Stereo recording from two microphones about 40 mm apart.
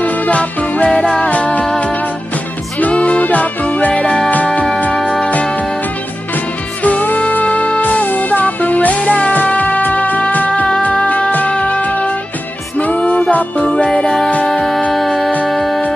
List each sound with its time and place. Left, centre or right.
0.0 s music: left
0.8 s music: left
1.3 s music: left
2.8 s music: left
6.8 s music: left
13.9 s music: centre